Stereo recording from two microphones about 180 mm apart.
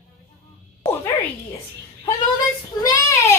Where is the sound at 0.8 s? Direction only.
15° left (ahead or behind).